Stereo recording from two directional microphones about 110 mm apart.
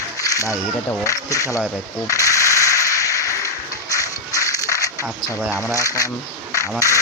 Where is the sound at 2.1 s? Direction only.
30° left (ahead or behind).